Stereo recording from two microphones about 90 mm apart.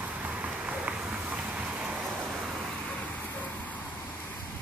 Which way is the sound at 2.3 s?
Centre (ahead or behind).